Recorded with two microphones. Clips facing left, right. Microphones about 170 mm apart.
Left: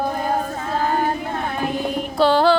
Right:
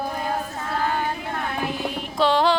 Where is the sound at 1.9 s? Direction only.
35° left (ahead or behind).